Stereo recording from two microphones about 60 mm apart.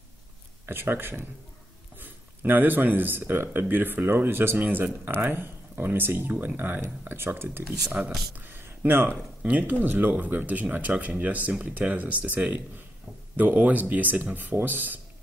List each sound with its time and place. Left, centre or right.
0.7 s speech: right
4.6 s speech: right
8.0 s speech: right
8.4 s a sound: right
9.1 s speech: right